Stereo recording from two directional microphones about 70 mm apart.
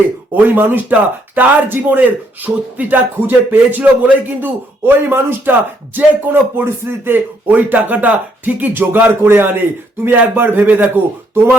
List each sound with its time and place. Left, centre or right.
0.3 s speech: right